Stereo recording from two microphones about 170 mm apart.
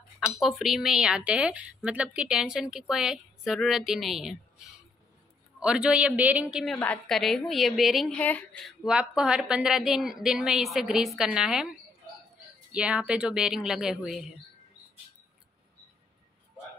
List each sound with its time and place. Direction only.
0.2 s a woman's voice: centre (ahead or behind)
5.6 s a man's voice: 5° right (ahead or behind)
12.7 s a woman's voice: 5° right (ahead or behind)